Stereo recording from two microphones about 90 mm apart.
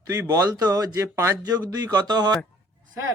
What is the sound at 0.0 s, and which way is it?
Speech, 40° right (ahead or behind).